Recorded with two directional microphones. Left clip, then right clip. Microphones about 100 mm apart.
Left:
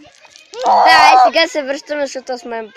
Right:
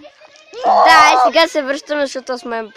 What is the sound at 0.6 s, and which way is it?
Speech, 45° right (ahead or behind).